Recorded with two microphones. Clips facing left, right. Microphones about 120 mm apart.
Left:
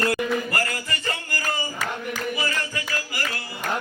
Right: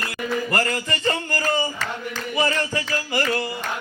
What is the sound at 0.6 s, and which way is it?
Music, 30° right (ahead or behind).